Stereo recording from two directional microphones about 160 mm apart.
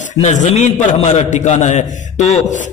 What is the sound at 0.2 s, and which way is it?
A man's voice, 50° left (ahead or behind).